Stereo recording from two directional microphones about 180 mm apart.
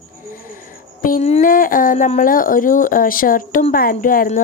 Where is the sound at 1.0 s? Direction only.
45° left (ahead or behind).